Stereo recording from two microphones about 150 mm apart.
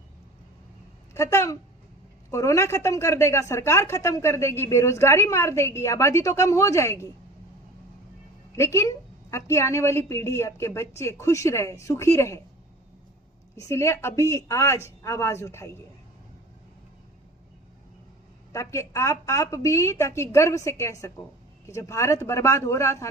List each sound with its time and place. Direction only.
1.1 s a woman's voice: 20° left (ahead or behind)
8.5 s a woman's voice: 15° left (ahead or behind)
13.6 s a woman's voice: 20° left (ahead or behind)
18.5 s a woman's voice: 20° left (ahead or behind)